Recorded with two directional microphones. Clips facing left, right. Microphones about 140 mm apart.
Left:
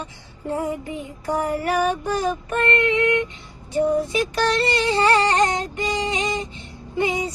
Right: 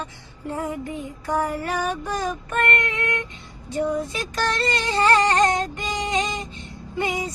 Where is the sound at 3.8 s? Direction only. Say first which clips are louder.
Left 5 dB; 15° left (ahead or behind).